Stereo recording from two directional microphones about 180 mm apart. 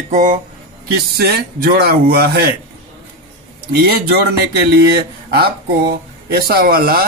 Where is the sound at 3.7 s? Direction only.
60° right (ahead or behind).